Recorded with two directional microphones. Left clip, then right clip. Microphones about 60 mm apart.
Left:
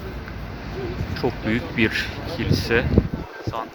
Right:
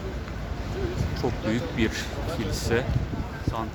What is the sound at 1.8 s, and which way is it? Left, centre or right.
Speech, left.